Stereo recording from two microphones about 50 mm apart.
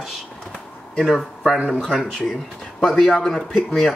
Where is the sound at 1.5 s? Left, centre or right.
Right.